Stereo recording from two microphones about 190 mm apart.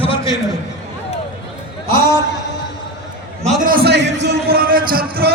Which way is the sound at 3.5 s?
50° right (ahead or behind).